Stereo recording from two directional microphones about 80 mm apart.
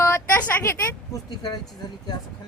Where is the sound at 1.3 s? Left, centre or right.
Left.